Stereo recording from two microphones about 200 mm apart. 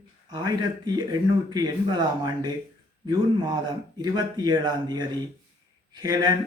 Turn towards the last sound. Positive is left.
turn(degrees=-20)  # may be behind; listen again after turning